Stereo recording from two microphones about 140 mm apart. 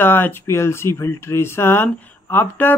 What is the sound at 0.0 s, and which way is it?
Speech, 15° left (ahead or behind).